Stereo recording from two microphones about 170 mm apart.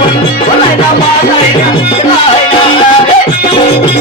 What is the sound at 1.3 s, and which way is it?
Music, 35° left (ahead or behind).